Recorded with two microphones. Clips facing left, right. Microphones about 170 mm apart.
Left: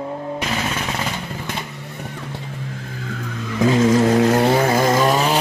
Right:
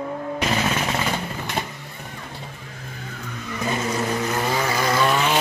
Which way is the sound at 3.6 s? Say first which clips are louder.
Left 10 dB; 90° left.